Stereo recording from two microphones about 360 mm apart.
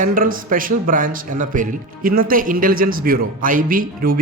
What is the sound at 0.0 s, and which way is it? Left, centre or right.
Speech, right.